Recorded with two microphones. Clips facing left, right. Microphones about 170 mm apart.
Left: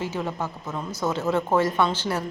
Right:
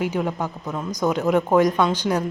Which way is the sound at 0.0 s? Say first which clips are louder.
Right 5 dB; 15° right (ahead or behind).